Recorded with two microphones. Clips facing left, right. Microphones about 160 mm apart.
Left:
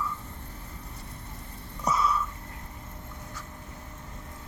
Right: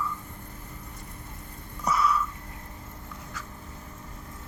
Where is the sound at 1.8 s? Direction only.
25° left (ahead or behind).